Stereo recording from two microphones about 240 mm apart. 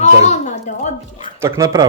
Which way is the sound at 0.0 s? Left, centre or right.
Left.